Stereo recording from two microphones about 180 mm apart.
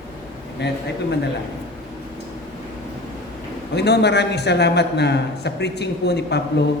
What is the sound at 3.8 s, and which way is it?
A man's voice, 65° left (ahead or behind).